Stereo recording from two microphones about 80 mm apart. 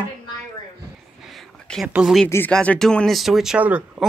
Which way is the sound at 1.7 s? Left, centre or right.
Centre.